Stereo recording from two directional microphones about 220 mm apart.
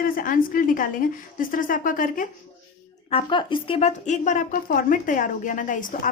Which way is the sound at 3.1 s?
20° left (ahead or behind).